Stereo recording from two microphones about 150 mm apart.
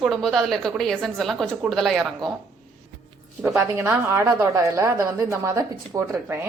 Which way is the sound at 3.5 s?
10° right (ahead or behind).